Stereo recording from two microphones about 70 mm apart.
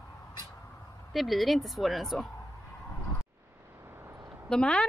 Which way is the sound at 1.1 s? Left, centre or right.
Centre.